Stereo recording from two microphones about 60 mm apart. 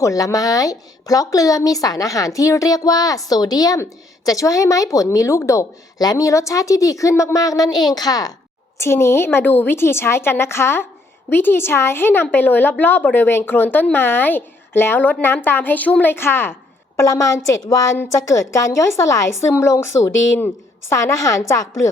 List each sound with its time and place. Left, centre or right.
0.0 s speech: left
4.3 s a woman's voice: left
5.5 s speech: left
8.8 s a woman's voice: left
16.1 s a woman's voice: left
17.0 s a woman's voice: left